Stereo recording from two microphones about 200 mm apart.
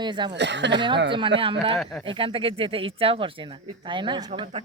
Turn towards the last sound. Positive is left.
turn(degrees=-25)  # may be behind; listen again after turning